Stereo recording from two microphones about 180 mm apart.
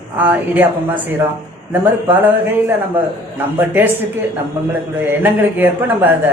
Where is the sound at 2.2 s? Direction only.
10° right (ahead or behind).